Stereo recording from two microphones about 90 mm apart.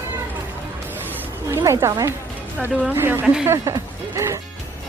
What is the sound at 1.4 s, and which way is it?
Speech, 35° right (ahead or behind).